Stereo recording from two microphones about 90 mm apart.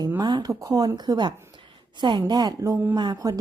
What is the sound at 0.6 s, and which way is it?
Speech, 40° right (ahead or behind).